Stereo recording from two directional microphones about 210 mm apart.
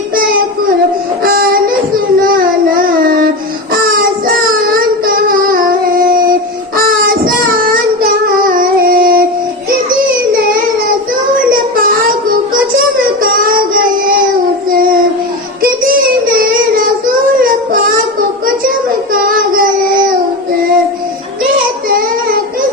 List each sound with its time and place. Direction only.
1.2 s a sound: 45° right (ahead or behind)
2.7 s child singing: 45° right (ahead or behind)
4.3 s child singing: 45° right (ahead or behind)
5.5 s music: 40° right (ahead or behind)
6.7 s child singing: 40° right (ahead or behind)
8.4 s a sound: 40° right (ahead or behind)
13.2 s child singing: 45° right (ahead or behind)
16.3 s child singing: 45° right (ahead or behind)
19.1 s child singing: 45° right (ahead or behind)
21.8 s child singing: 45° right (ahead or behind)